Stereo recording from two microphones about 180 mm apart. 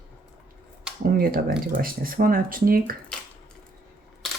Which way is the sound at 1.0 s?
55° right (ahead or behind).